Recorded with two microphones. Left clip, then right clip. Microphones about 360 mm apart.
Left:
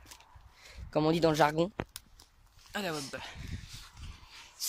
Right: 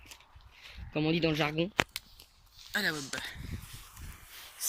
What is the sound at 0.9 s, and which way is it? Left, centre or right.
Speech, left.